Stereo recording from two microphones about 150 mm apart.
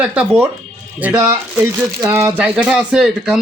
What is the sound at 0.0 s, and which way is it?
Speech, 5° right (ahead or behind).